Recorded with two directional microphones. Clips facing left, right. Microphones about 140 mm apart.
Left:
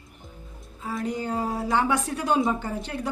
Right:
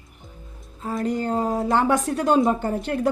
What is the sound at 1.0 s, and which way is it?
Speech, centre (ahead or behind).